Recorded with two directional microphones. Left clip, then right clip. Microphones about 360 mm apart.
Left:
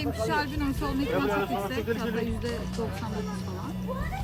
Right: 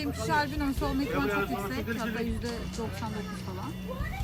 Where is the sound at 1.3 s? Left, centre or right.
Left.